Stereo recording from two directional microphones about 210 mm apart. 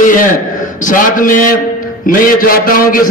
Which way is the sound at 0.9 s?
40° left (ahead or behind).